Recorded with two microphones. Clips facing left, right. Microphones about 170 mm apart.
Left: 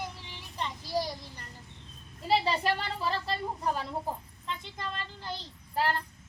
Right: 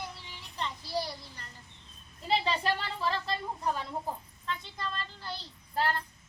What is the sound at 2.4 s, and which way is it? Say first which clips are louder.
Speech: left 1 dB; 10° left (ahead or behind).